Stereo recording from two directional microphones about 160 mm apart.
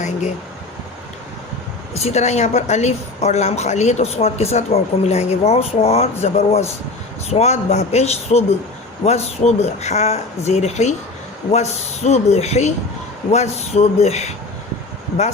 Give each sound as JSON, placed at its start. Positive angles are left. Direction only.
{"t": 0.0, "sound": "a woman's voice", "side_deg": 45}
{"t": 1.9, "sound": "a woman's voice", "side_deg": 45}